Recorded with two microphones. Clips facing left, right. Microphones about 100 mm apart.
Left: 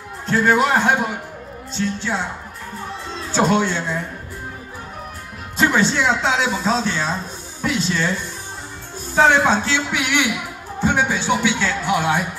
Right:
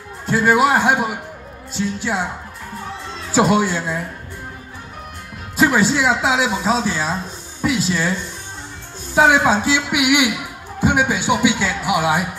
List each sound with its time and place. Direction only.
0.3 s speech: 5° right (ahead or behind)
3.3 s speech: 10° right (ahead or behind)
5.6 s a woman's voice: 5° right (ahead or behind)
9.1 s speech: 10° right (ahead or behind)